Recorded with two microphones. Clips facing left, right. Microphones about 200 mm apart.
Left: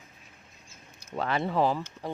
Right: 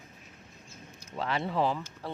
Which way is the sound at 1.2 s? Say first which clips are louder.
Left 3 dB; 50° left (ahead or behind).